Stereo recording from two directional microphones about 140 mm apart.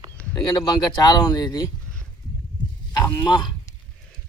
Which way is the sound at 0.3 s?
30° left (ahead or behind).